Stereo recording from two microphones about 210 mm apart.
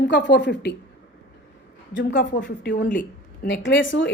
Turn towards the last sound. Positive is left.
turn(degrees=65)  # may be behind; listen again after turning